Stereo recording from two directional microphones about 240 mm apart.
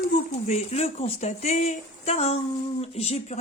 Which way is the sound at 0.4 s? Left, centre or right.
Left.